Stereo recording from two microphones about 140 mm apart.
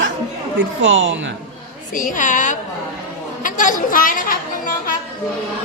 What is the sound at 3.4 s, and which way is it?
Music, 70° left (ahead or behind).